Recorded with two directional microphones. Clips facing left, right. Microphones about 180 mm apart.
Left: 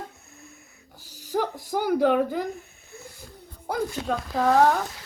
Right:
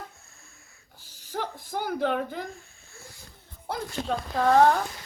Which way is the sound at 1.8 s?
5° left (ahead or behind).